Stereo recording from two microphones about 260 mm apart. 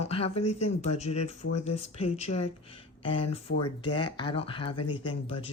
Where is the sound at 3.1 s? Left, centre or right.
Left.